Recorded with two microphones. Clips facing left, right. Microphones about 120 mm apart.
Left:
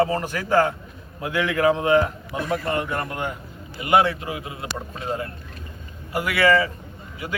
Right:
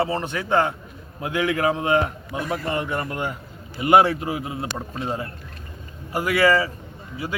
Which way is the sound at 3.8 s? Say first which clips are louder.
Right 3 dB; 40° right (ahead or behind).